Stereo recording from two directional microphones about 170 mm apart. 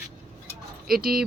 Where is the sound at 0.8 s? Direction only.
60° right (ahead or behind).